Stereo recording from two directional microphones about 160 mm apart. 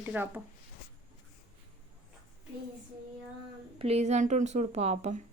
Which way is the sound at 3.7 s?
40° right (ahead or behind).